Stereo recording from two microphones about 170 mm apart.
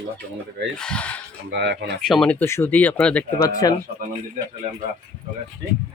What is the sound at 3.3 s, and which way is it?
Speech, 20° left (ahead or behind).